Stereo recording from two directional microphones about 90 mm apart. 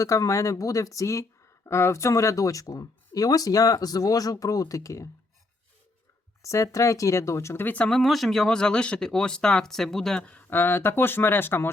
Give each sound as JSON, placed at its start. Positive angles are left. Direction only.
{"t": 0.0, "sound": "speech", "side_deg": 35}
{"t": 6.4, "sound": "speech", "side_deg": 35}
{"t": 7.9, "sound": "speech", "side_deg": 0}